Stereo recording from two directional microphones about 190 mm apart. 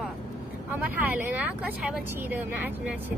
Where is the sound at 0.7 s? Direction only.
10° right (ahead or behind).